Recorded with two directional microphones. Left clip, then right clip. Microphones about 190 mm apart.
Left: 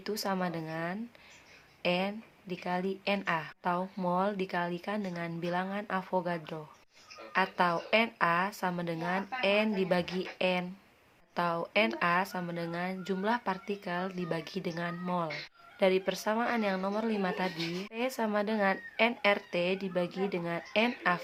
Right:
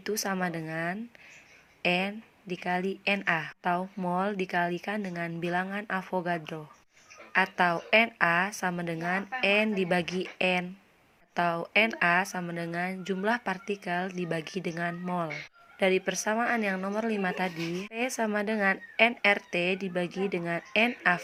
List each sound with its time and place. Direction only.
0.0 s a woman's voice: 20° right (ahead or behind)